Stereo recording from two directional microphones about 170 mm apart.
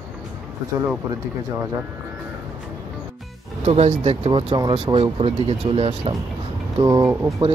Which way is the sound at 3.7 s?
40° right (ahead or behind).